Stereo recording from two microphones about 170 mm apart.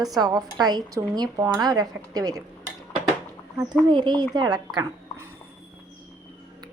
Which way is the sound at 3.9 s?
25° right (ahead or behind).